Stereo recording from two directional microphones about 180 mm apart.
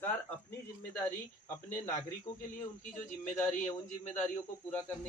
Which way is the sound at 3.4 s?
45° left (ahead or behind).